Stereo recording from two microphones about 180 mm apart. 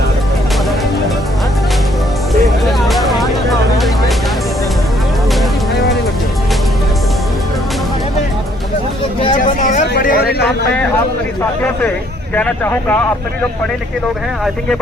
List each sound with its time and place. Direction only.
2.6 s music: centre (ahead or behind)
9.4 s vehicle: 45° left (ahead or behind)
9.9 s a sound: 55° left (ahead or behind)
12.3 s speech: 10° left (ahead or behind)